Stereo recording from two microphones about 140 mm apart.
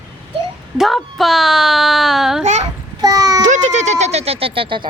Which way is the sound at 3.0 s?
25° right (ahead or behind).